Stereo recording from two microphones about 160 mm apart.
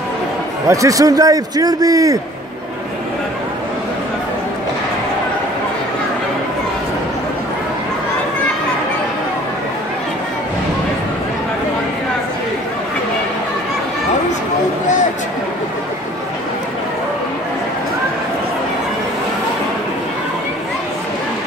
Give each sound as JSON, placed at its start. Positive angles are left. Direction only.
{"t": 0.7, "sound": "a man's voice", "side_deg": -20}